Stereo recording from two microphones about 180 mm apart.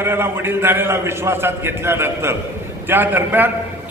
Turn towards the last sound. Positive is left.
turn(degrees=-10)  # may be behind; listen again after turning